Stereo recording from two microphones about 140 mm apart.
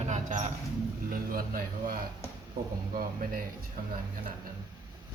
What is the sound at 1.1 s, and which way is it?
Speech, 90° right.